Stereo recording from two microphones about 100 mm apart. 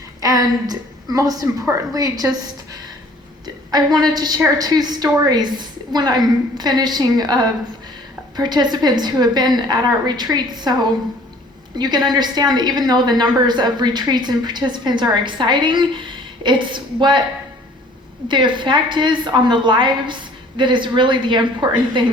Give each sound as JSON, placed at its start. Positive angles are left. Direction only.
{"t": 0.2, "sound": "a woman's voice", "side_deg": -40}
{"t": 3.4, "sound": "a woman's voice", "side_deg": -45}
{"t": 11.8, "sound": "a woman's voice", "side_deg": -45}
{"t": 18.3, "sound": "a woman's voice", "side_deg": -50}